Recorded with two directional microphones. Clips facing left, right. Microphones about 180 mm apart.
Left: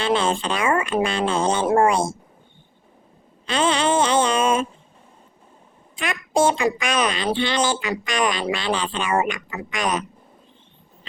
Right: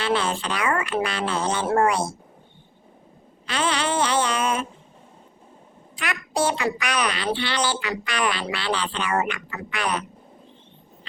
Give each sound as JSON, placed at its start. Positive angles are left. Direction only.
{"t": 0.0, "sound": "speech", "side_deg": 25}
{"t": 3.4, "sound": "a sound", "side_deg": 25}
{"t": 6.0, "sound": "speech", "side_deg": 25}